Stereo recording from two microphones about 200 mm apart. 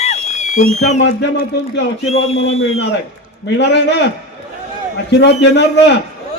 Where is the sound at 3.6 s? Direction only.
60° left (ahead or behind).